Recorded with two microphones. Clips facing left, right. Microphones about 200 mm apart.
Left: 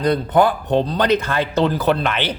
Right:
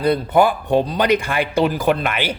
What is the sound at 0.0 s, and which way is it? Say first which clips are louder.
A man's voice: even; 10° right (ahead or behind).